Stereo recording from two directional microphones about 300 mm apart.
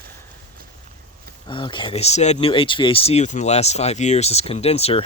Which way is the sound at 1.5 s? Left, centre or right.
Centre.